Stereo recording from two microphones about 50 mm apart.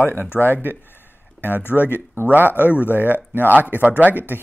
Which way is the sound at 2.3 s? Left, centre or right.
Right.